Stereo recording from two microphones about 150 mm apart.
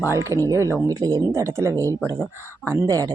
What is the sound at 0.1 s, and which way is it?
Speech, 20° right (ahead or behind).